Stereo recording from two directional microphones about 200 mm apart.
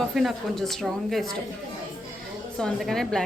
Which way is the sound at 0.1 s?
Centre (ahead or behind).